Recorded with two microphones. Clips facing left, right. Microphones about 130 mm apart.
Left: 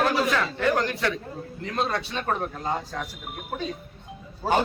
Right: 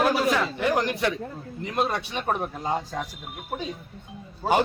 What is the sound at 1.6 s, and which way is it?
A man's voice, 15° right (ahead or behind).